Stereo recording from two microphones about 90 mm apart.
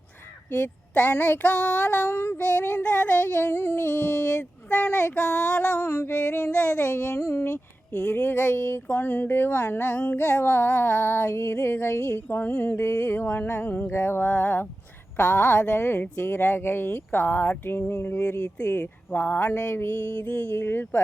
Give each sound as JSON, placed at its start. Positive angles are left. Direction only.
{"t": 0.6, "sound": "child singing", "side_deg": 20}
{"t": 5.9, "sound": "speech", "side_deg": 25}
{"t": 6.1, "sound": "child singing", "side_deg": 15}
{"t": 7.2, "sound": "speech", "side_deg": 35}
{"t": 7.9, "sound": "speech", "side_deg": 15}
{"t": 15.1, "sound": "child singing", "side_deg": 15}
{"t": 16.1, "sound": "speech", "side_deg": 20}
{"t": 18.6, "sound": "child singing", "side_deg": 20}
{"t": 19.7, "sound": "speech", "side_deg": 25}